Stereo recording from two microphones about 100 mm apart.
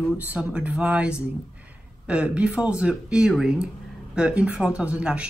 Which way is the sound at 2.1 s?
10° right (ahead or behind).